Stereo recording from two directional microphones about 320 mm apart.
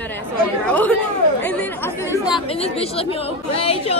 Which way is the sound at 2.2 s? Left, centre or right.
Centre.